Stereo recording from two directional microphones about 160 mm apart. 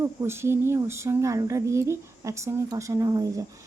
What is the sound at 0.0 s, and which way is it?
Speech, 15° right (ahead or behind).